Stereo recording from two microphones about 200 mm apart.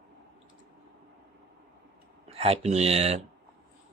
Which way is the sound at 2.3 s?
30° right (ahead or behind).